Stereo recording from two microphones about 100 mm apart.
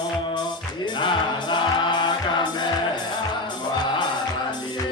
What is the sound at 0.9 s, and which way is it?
Music, 50° left (ahead or behind).